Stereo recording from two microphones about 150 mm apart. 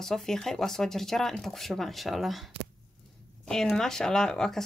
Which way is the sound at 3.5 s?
5° left (ahead or behind).